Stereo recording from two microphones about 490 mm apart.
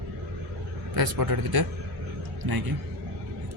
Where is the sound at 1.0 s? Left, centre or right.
Right.